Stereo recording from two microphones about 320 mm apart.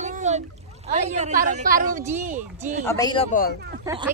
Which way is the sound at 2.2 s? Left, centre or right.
Right.